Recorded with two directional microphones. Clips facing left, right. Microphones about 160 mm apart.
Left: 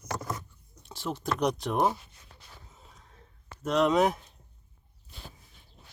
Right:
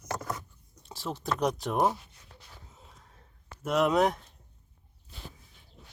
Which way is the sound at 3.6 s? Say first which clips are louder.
Left 1 dB; 5° right (ahead or behind).